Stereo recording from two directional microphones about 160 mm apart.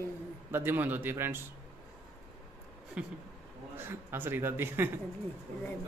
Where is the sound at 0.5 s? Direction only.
15° right (ahead or behind).